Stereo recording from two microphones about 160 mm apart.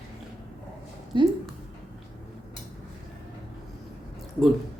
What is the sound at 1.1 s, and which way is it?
Speech, 30° right (ahead or behind).